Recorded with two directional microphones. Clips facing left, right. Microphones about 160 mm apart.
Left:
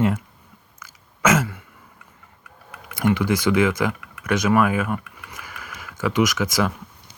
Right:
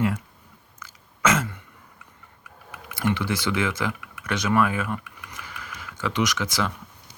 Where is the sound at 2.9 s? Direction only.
15° left (ahead or behind).